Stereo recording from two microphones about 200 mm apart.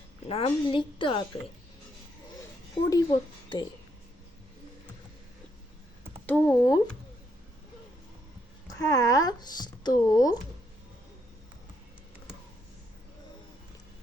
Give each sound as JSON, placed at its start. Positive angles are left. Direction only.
{"t": 0.3, "sound": "a woman's voice", "side_deg": 25}
{"t": 2.9, "sound": "a woman's voice", "side_deg": 20}
{"t": 6.2, "sound": "speech", "side_deg": 5}
{"t": 8.8, "sound": "speech", "side_deg": 15}